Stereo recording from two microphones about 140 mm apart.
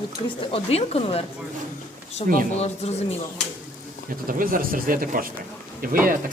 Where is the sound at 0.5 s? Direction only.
45° left (ahead or behind).